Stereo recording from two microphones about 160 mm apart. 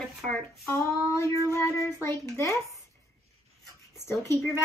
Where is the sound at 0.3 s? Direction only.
15° left (ahead or behind).